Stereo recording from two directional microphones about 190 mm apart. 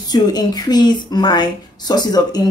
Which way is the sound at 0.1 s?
20° left (ahead or behind).